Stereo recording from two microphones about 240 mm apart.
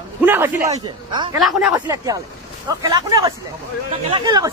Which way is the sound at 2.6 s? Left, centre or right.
Centre.